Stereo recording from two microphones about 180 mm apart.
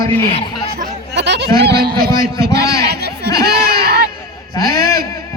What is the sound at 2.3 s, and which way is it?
A man's voice, 65° right (ahead or behind).